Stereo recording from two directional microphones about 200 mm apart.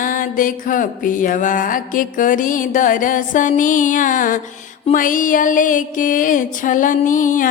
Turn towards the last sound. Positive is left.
turn(degrees=40)  # may be behind; listen again after turning